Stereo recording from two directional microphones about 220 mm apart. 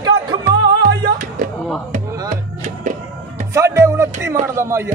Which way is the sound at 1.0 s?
40° right (ahead or behind).